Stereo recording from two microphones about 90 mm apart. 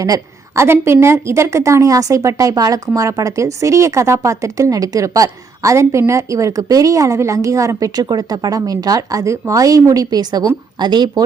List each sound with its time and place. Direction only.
0.0 s a woman's voice: 35° right (ahead or behind); by 11.2 s 55° right (ahead or behind)